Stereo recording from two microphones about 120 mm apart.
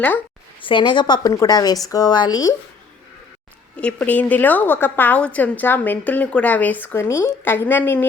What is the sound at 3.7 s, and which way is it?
A woman's voice, 10° left (ahead or behind).